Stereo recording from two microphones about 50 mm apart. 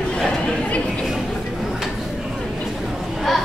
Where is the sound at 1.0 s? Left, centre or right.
Centre.